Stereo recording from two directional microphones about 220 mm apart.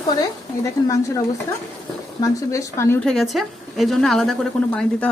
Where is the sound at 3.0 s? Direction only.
Centre (ahead or behind).